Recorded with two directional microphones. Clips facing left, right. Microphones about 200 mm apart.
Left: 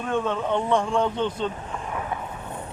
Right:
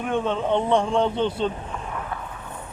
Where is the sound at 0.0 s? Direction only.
20° right (ahead or behind).